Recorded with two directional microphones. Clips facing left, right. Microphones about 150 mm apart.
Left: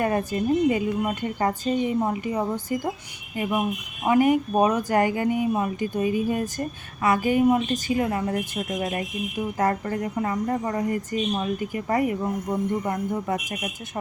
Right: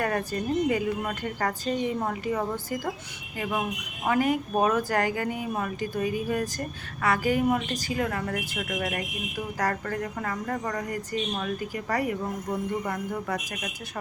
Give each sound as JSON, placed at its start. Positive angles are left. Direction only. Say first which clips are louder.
{"t": 0.0, "sound": "speech", "louder": "left 4 dB", "side_deg": 20}
{"t": 4.0, "sound": "speech", "louder": "left 5 dB", "side_deg": 20}